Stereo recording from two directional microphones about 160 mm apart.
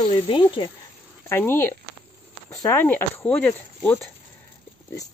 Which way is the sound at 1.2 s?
15° left (ahead or behind).